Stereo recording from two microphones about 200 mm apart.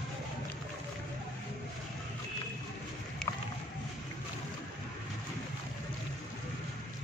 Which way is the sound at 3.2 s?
5° left (ahead or behind).